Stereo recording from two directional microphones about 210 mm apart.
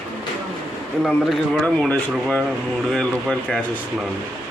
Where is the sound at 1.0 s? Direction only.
Centre (ahead or behind).